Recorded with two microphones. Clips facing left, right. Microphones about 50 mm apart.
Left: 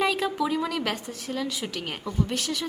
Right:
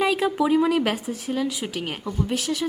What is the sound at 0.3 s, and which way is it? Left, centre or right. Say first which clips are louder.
Speech: right 7 dB; centre.